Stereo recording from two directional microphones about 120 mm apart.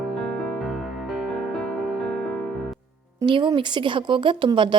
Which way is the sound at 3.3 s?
45° right (ahead or behind).